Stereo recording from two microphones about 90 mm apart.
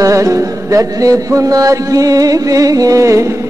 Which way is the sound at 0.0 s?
35° right (ahead or behind).